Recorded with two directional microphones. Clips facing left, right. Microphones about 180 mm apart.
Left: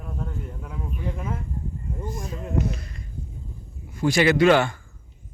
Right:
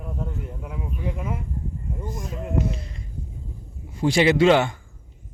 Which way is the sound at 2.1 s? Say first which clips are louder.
Right 1 dB; 20° right (ahead or behind).